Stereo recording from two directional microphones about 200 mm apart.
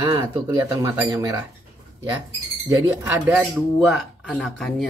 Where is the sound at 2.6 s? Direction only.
10° right (ahead or behind).